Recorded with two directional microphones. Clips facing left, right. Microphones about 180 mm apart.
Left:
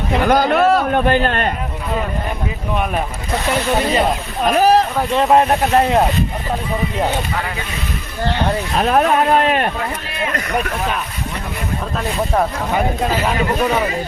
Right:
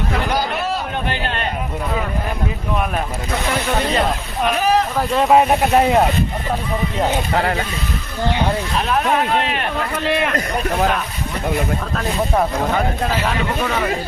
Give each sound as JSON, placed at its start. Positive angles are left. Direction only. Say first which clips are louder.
{"t": 0.3, "sound": "a man's voice", "louder": "left 8 dB", "side_deg": 50}
{"t": 3.8, "sound": "speech", "louder": "left 2 dB", "side_deg": 0}
{"t": 4.4, "sound": "speech", "louder": "left 5 dB", "side_deg": 40}
{"t": 4.9, "sound": "speech", "louder": "even", "side_deg": 0}
{"t": 8.8, "sound": "speech", "louder": "left 5 dB", "side_deg": 45}
{"t": 10.1, "sound": "a man's voice", "louder": "right 5 dB", "side_deg": -70}